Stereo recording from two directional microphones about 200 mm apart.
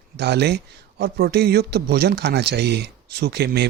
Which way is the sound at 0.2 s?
55° right (ahead or behind).